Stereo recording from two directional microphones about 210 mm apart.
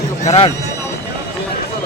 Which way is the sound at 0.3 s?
25° left (ahead or behind).